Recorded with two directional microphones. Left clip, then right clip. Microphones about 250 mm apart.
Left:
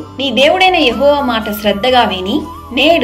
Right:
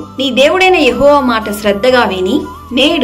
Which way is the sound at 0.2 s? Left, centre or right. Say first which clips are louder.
Right 1 dB; centre.